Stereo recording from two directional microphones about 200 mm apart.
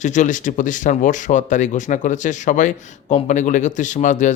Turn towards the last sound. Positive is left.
turn(degrees=40)  # may be behind; listen again after turning